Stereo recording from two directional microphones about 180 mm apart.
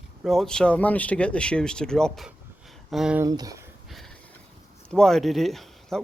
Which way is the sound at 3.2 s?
20° right (ahead or behind).